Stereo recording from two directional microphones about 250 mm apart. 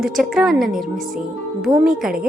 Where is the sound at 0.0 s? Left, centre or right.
Centre.